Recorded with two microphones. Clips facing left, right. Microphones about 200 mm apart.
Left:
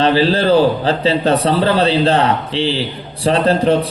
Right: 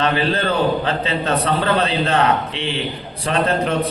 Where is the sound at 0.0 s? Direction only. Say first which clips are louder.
Left 6 dB; 30° left (ahead or behind).